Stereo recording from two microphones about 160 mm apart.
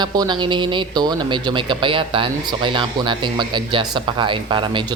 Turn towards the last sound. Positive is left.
turn(degrees=-30)  # may be behind; listen again after turning